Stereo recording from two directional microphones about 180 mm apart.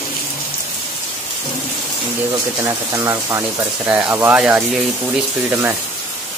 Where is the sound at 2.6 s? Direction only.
15° right (ahead or behind).